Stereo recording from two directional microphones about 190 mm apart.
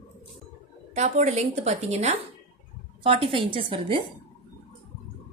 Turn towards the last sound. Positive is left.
turn(degrees=-30)  # may be behind; listen again after turning